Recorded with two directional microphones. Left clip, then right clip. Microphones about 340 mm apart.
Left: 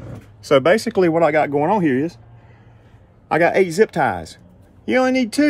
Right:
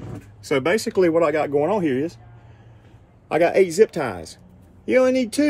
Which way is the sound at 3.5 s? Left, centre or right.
Left.